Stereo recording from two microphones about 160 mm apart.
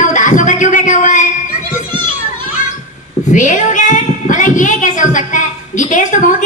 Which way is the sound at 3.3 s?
50° left (ahead or behind).